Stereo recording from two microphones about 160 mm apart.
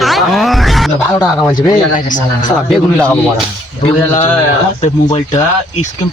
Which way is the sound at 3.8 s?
40° left (ahead or behind).